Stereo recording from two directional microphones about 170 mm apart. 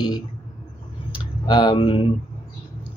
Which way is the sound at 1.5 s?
30° left (ahead or behind).